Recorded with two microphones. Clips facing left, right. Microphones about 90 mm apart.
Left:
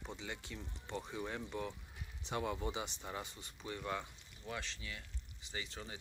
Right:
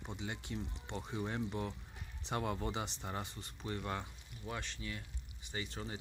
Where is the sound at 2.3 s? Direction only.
45° right (ahead or behind).